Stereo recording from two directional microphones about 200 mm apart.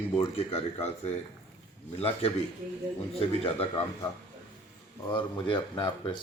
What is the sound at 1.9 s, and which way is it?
A man's voice, 30° left (ahead or behind).